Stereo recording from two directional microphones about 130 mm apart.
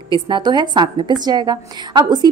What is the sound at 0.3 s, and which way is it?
A woman's voice, 35° right (ahead or behind).